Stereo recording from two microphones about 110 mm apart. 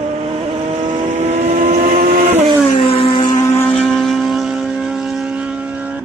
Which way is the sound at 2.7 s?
55° left (ahead or behind).